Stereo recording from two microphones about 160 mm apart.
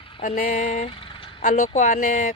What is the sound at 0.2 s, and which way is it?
Speech, 50° left (ahead or behind).